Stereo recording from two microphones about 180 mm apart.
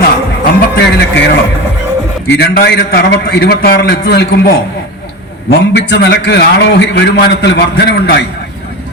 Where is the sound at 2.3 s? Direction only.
65° left (ahead or behind).